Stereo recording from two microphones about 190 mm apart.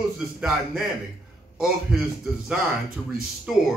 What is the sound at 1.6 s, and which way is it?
A man's voice, centre (ahead or behind).